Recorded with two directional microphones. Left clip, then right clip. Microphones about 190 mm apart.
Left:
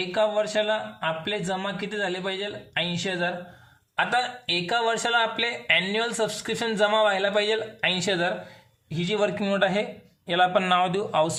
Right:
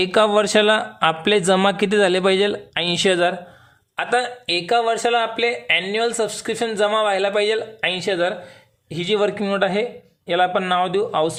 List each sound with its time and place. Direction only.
0.0 s speech: 45° right (ahead or behind)
3.9 s speech: 25° right (ahead or behind)
8.9 s speech: 30° right (ahead or behind); by 11.3 s 15° right (ahead or behind)